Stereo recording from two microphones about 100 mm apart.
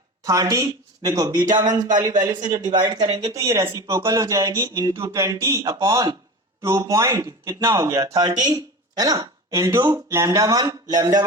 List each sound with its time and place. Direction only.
0.3 s speech: 35° right (ahead or behind)